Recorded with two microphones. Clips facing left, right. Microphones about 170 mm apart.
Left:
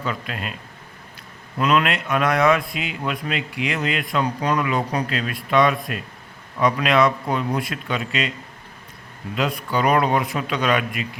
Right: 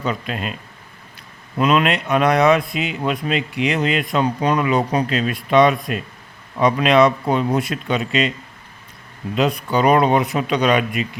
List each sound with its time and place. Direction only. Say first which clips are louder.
0.0 s a man's voice: right 4 dB; 20° right (ahead or behind)
1.5 s a man's voice: right 3 dB; 20° right (ahead or behind)
9.3 s a man's voice: right 5 dB; 20° right (ahead or behind)